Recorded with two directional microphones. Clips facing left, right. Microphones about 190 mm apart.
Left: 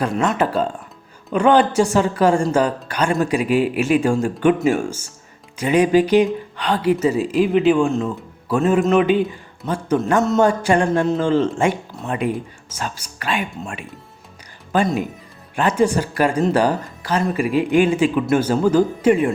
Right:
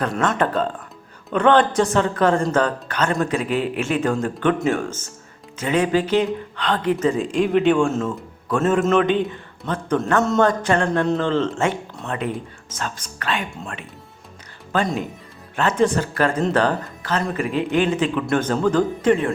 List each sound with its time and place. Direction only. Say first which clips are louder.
0.0 s speech: left 2 dB; centre (ahead or behind)